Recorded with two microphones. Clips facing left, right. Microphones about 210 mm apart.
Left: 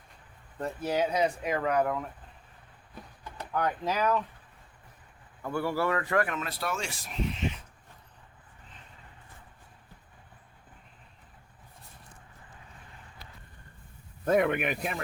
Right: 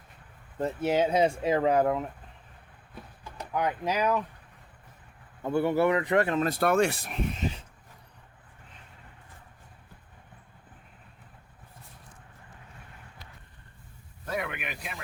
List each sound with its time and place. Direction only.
0.6 s speech: 25° right (ahead or behind)
3.5 s speech: 10° right (ahead or behind)
5.4 s speech: 20° right (ahead or behind)
6.4 s speech: 50° right (ahead or behind)
14.3 s speech: 50° left (ahead or behind)